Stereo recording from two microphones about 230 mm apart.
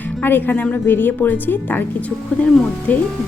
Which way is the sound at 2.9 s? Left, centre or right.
Centre.